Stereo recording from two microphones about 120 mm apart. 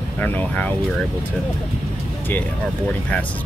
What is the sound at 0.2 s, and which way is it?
Speech, 15° left (ahead or behind).